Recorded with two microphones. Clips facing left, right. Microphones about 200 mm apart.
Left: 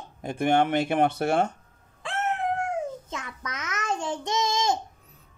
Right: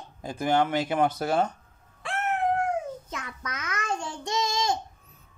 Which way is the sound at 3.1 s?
20° left (ahead or behind).